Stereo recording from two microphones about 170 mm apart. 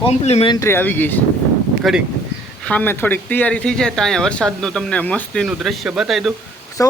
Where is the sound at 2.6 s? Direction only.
10° left (ahead or behind).